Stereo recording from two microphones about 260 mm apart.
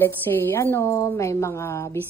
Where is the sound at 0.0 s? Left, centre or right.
Centre.